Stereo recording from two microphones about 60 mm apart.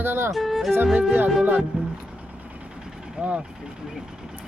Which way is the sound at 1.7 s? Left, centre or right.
Centre.